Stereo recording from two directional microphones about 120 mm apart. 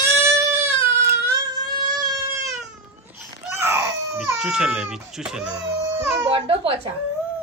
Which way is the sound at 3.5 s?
20° right (ahead or behind).